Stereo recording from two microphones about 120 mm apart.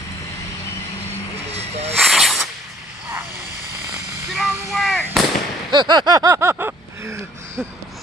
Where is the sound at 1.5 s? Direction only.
60° right (ahead or behind).